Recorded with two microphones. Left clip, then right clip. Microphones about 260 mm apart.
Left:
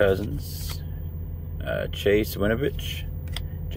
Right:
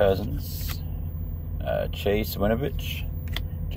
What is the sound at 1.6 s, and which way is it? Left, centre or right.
Speech, centre.